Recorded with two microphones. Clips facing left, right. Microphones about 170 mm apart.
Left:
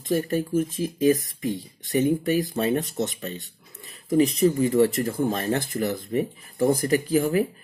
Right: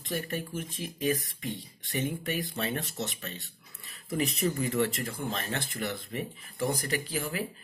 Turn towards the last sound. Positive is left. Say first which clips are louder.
# left 12 dB
turn(degrees=50)  # may be behind; listen again after turning